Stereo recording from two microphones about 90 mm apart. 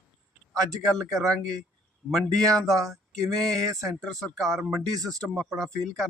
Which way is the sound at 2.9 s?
5° left (ahead or behind).